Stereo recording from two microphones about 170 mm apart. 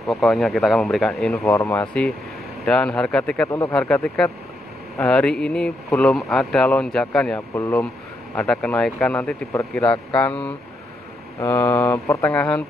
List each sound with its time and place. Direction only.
0.1 s speech: centre (ahead or behind)
1.3 s speech: 15° left (ahead or behind)
3.4 s speech: 20° left (ahead or behind)
3.7 s speech: 5° left (ahead or behind)
7.3 s speech: 15° left (ahead or behind)
9.5 s speech: 20° left (ahead or behind)
9.8 s speech: 5° left (ahead or behind)
11.3 s speech: 15° left (ahead or behind)